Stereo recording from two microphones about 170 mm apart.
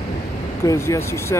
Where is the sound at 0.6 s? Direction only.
15° left (ahead or behind).